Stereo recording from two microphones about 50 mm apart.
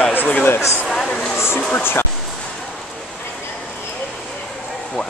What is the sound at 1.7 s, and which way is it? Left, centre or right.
Speech, left.